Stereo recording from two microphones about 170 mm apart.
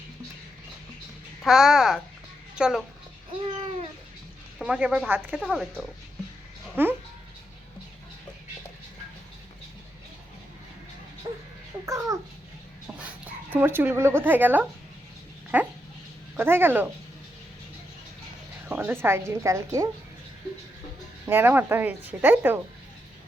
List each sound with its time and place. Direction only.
1.5 s a child's voice: centre (ahead or behind)
4.6 s a child's voice: 5° right (ahead or behind)
11.9 s babbling: 20° right (ahead or behind)
13.1 s speech: 10° right (ahead or behind)
18.7 s speech: 10° right (ahead or behind)
21.2 s speech: 10° right (ahead or behind)